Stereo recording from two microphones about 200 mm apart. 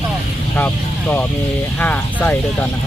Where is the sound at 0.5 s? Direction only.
10° left (ahead or behind).